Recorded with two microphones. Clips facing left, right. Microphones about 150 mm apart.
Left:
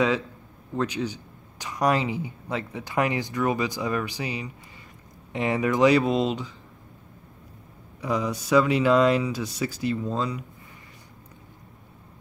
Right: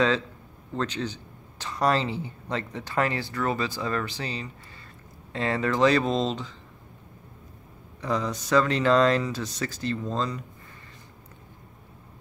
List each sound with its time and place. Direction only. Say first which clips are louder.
0.7 s speech: left 2 dB; 10° left (ahead or behind)
8.0 s speech: left 1 dB; 10° left (ahead or behind)